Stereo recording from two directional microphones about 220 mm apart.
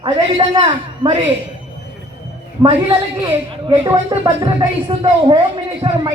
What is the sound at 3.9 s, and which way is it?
A man's voice, 15° right (ahead or behind).